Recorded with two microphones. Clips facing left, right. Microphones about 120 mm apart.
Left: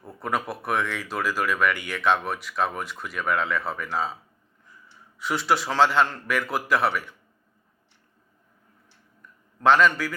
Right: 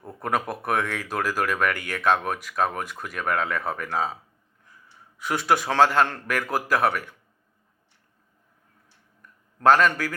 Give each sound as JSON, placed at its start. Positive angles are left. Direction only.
{"t": 0.2, "sound": "speech", "side_deg": -50}
{"t": 9.6, "sound": "speech", "side_deg": -45}